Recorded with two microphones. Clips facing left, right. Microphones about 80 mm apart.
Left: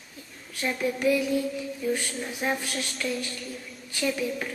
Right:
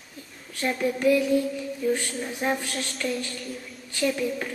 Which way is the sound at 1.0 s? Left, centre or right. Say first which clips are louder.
Right 3 dB; centre.